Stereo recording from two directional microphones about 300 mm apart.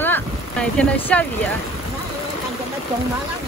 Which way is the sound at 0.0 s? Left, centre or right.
Centre.